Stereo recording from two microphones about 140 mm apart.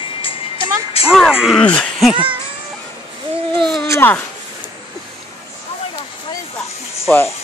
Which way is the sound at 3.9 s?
15° left (ahead or behind).